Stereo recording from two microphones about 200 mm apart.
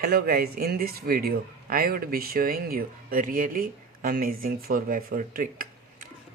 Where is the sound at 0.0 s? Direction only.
50° right (ahead or behind).